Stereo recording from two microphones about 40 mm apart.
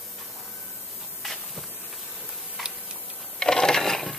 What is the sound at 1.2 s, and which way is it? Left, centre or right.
Hiss, centre.